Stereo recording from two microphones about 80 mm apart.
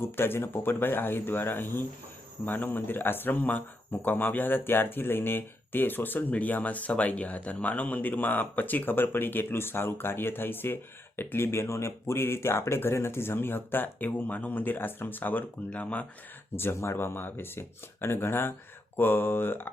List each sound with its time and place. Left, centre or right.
0.0 s speech: left
16.6 s speech: left